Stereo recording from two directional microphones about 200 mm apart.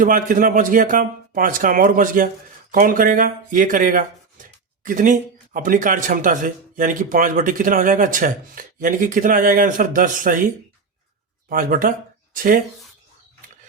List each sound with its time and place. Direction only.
0.0 s speech: 40° right (ahead or behind)